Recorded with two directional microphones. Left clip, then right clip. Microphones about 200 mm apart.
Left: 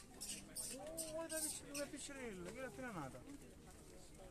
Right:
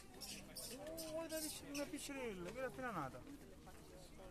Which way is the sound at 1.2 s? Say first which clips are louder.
Left 1 dB; 30° right (ahead or behind).